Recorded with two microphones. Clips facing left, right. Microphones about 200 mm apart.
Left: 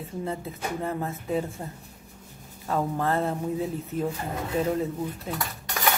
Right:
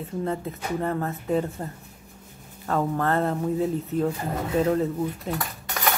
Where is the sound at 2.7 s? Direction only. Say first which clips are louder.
Right 2 dB; 5° left (ahead or behind).